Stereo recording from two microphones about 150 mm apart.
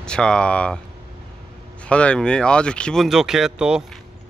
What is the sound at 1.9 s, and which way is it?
Speech, 5° left (ahead or behind).